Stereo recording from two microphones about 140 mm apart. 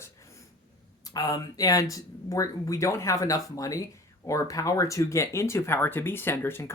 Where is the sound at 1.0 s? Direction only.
25° left (ahead or behind).